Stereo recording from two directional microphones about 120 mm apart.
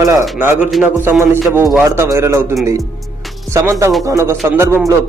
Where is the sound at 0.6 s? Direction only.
Centre (ahead or behind).